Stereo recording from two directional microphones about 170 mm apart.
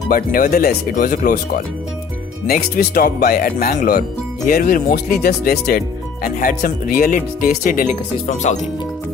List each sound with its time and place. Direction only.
0.1 s speech: 55° left (ahead or behind)